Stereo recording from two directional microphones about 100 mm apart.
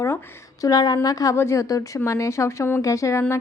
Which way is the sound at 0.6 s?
40° left (ahead or behind).